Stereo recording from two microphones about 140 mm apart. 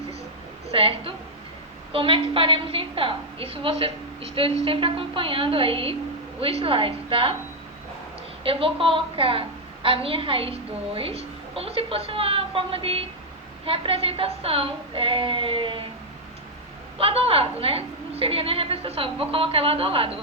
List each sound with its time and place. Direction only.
0.7 s a woman's voice: 40° right (ahead or behind)
8.4 s a woman's voice: 40° right (ahead or behind)
17.0 s a woman's voice: 40° right (ahead or behind)